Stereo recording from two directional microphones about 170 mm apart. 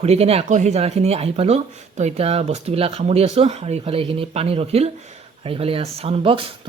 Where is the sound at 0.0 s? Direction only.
35° right (ahead or behind).